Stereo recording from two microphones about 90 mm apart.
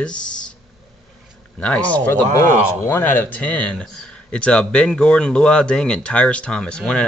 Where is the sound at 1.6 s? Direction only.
15° left (ahead or behind).